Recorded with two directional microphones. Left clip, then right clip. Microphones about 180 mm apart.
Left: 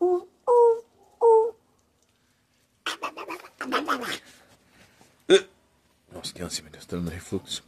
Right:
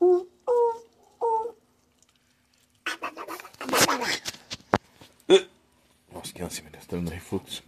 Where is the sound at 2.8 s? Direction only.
10° left (ahead or behind).